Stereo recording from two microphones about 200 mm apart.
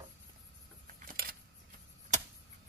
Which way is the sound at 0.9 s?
45° right (ahead or behind).